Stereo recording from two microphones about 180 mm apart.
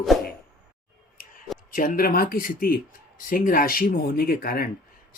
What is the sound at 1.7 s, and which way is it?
Speech, 50° left (ahead or behind).